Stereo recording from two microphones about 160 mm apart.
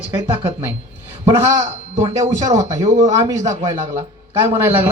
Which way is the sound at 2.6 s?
20° right (ahead or behind).